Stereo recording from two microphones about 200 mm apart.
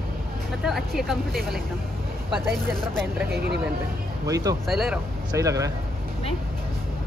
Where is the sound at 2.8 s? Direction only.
5° left (ahead or behind).